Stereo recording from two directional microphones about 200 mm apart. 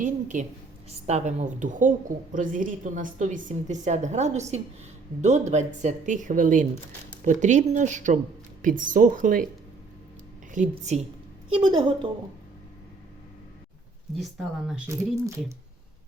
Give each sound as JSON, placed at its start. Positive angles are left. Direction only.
{"t": 0.0, "sound": "a woman's voice", "side_deg": -40}
{"t": 10.5, "sound": "a woman's voice", "side_deg": -35}
{"t": 11.5, "sound": "a woman's voice", "side_deg": -25}
{"t": 14.2, "sound": "speech", "side_deg": 0}